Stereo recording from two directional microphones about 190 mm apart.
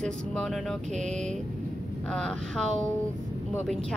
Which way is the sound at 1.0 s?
40° right (ahead or behind).